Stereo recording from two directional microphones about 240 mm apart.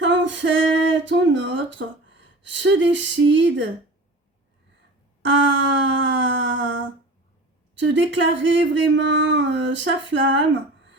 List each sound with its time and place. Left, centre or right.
0.0 s speech: right
5.2 s speech: right